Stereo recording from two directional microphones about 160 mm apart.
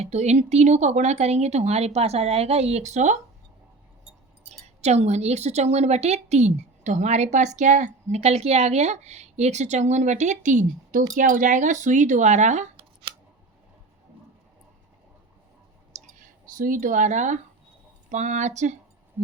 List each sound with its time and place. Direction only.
0.0 s a woman's voice: 45° right (ahead or behind)
4.6 s a woman's voice: 45° right (ahead or behind)
12.7 s scissors: 35° right (ahead or behind)
15.9 s clicking: 45° right (ahead or behind)
16.6 s a woman's voice: 60° right (ahead or behind)